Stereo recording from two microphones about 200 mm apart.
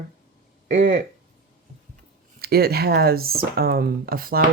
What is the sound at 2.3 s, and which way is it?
Speech, 50° right (ahead or behind).